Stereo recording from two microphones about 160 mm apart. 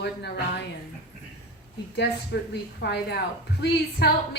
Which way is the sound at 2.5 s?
90° left.